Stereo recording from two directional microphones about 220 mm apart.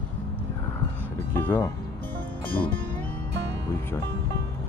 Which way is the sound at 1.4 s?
10° left (ahead or behind).